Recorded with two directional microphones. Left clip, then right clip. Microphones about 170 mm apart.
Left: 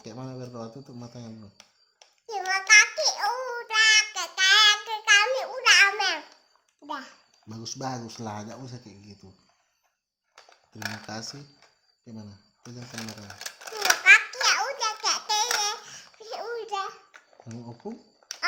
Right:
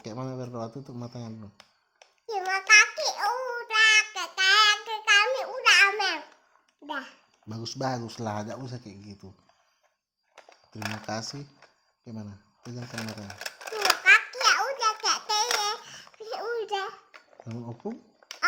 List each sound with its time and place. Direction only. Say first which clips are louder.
0.0 s a sound: right 3 dB; 50° right (ahead or behind)
1.5 s a sound: left 1 dB; 20° right (ahead or behind)
2.5 s babbling: left 1 dB; 10° right (ahead or behind)
3.3 s child singing: even; 10° right (ahead or behind)
6.8 s a sound: right 1 dB; 15° right (ahead or behind)
7.4 s speech: right 3 dB; 50° right (ahead or behind)
10.8 s speech: even; 20° right (ahead or behind)
11.0 s speech: right 3 dB; 55° right (ahead or behind)
12.8 s typewriter: right 2 dB; 20° right (ahead or behind)
15.4 s babbling: even; 15° right (ahead or behind)
17.8 s speech: right 2 dB; 50° right (ahead or behind)